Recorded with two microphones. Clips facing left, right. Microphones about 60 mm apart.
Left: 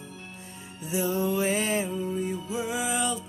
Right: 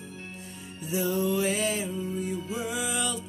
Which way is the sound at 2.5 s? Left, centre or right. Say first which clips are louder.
Left 2 dB; left.